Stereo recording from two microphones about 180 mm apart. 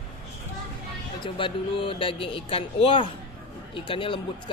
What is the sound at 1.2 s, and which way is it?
A woman's voice, 30° left (ahead or behind).